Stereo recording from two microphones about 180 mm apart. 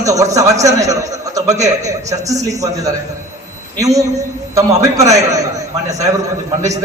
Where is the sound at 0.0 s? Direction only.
20° right (ahead or behind).